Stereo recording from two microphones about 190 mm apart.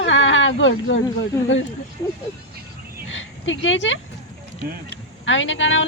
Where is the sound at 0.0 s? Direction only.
85° left.